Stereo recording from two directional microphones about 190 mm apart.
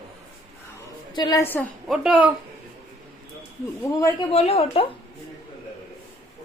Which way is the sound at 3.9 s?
15° left (ahead or behind).